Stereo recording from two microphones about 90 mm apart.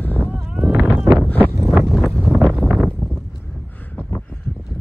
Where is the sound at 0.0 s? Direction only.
20° left (ahead or behind).